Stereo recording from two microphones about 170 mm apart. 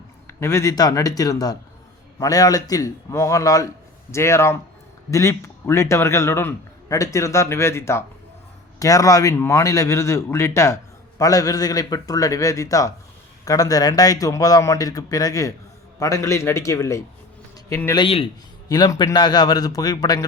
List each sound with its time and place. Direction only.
0.3 s a man's voice: 15° left (ahead or behind)
18.0 s a man's voice: 35° left (ahead or behind)
18.7 s speech: 25° left (ahead or behind)